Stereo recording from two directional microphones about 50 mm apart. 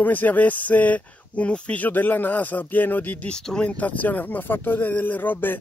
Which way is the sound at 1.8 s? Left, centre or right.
Left.